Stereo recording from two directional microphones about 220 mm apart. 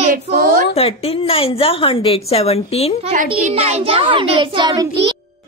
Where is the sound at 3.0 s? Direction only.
30° right (ahead or behind).